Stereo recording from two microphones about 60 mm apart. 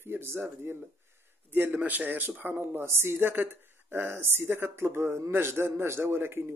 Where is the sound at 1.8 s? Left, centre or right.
Right.